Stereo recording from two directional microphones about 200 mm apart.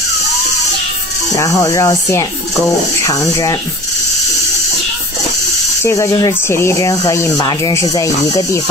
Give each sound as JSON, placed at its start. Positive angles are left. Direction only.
{"t": 1.3, "sound": "speech", "side_deg": 15}
{"t": 5.8, "sound": "speech", "side_deg": 15}